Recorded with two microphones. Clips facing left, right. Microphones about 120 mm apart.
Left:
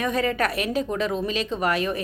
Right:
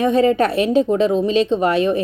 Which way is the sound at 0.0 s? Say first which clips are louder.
Right 9 dB; 25° right (ahead or behind).